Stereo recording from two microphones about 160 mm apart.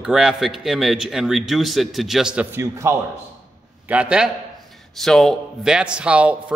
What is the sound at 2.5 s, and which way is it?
A man's voice, 15° right (ahead or behind).